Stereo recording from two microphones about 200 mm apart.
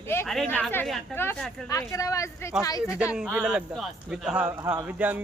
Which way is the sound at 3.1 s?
5° right (ahead or behind).